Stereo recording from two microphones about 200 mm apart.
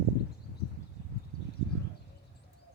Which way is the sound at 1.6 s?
55° left (ahead or behind).